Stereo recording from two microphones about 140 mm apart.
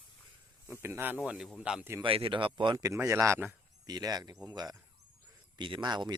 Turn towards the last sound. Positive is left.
turn(degrees=-30)  # may be behind; listen again after turning